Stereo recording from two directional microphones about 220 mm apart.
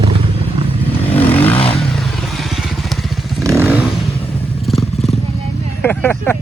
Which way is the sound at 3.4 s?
10° right (ahead or behind).